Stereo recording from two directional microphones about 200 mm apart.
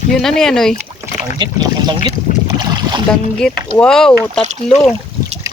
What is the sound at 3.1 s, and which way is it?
Speech, 5° left (ahead or behind).